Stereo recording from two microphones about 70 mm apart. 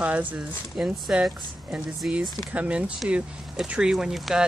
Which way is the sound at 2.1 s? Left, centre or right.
Centre.